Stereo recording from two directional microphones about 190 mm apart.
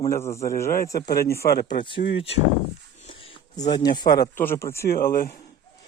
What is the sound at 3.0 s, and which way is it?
Speech, 30° left (ahead or behind).